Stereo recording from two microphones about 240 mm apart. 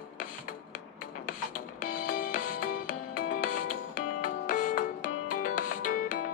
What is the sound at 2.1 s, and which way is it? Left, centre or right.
Music, left.